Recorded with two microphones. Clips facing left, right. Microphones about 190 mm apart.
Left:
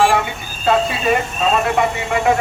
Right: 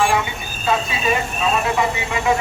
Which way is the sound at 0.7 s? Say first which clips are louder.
Left 4 dB; 60° left (ahead or behind).